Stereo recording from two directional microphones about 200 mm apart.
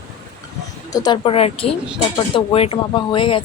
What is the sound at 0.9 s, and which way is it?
Speech, 20° left (ahead or behind).